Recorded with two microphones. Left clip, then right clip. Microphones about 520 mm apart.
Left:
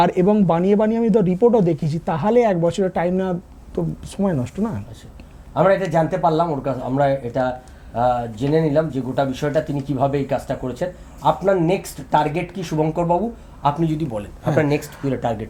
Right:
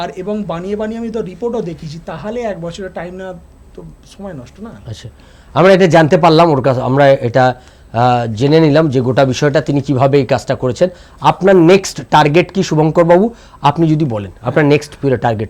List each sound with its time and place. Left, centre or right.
0.0 s speech: left
5.9 s a man's voice: right